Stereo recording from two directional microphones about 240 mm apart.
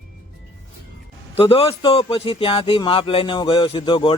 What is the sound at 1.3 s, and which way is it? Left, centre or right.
Speech, left.